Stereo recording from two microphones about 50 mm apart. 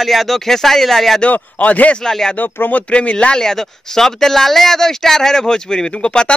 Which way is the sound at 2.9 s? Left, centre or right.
Left.